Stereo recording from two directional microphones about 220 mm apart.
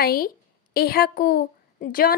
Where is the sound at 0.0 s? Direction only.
40° left (ahead or behind).